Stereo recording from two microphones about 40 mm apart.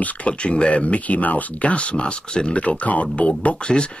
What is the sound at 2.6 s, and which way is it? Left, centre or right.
Speech, left.